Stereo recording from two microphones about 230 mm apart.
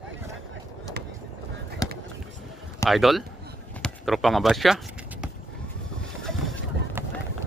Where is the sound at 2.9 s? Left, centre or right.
Centre.